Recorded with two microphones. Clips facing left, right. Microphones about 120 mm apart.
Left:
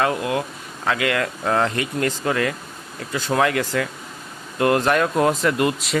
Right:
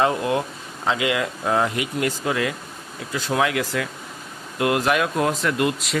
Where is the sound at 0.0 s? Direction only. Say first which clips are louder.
Right 1 dB; 25° right (ahead or behind).